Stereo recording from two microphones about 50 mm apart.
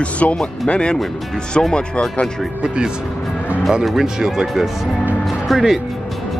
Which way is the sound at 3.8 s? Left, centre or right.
Centre.